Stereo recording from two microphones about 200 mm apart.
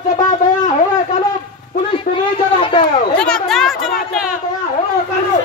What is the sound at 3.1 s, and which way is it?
Speech, 5° left (ahead or behind).